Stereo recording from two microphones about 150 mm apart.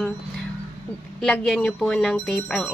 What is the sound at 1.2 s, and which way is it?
Speech, 5° left (ahead or behind).